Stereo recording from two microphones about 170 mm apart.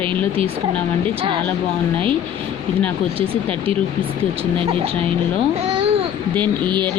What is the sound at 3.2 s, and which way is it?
Speech, 35° right (ahead or behind).